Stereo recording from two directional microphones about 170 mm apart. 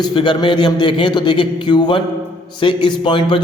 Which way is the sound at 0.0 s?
25° left (ahead or behind).